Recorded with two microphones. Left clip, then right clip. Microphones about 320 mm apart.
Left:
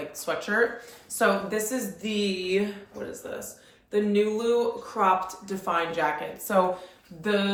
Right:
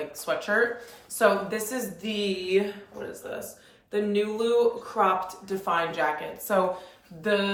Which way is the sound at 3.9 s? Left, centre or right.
Centre.